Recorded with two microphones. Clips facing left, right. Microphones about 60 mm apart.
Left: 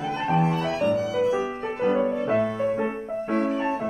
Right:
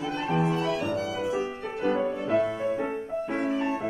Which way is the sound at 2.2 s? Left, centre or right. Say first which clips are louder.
Left 2 dB; left.